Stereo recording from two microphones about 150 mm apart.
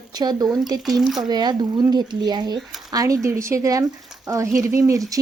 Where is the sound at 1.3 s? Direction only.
30° right (ahead or behind).